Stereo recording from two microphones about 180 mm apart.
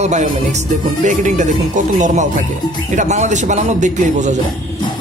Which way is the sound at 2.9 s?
40° right (ahead or behind).